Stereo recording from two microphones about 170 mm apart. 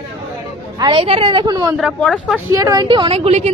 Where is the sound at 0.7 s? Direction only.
30° right (ahead or behind).